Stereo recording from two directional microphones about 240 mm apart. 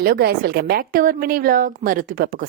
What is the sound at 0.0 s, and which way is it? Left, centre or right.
A woman's voice, right.